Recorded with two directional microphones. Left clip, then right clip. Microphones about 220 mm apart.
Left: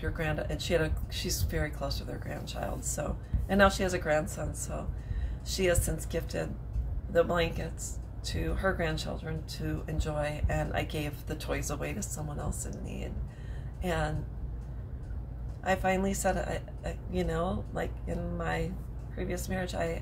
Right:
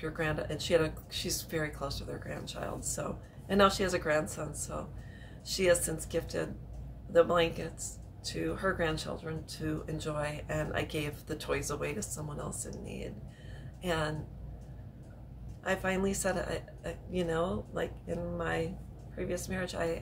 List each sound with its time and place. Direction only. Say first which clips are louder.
0.0 s speech: even; 10° right (ahead or behind)
15.6 s speech: left 3 dB; 10° right (ahead or behind)